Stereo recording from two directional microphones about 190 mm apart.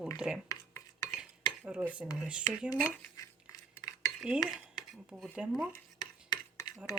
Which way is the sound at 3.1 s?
20° left (ahead or behind).